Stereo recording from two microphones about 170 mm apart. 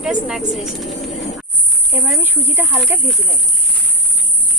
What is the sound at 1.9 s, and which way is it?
Speech, 10° right (ahead or behind).